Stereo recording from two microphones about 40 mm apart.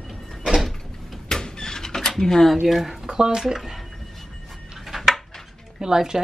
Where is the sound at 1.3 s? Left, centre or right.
Centre.